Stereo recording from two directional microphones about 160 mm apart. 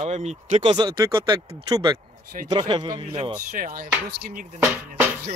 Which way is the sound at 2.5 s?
25° right (ahead or behind).